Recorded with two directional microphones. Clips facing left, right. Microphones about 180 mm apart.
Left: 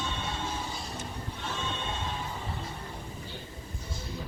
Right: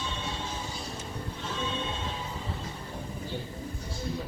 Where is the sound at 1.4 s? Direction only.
60° left (ahead or behind).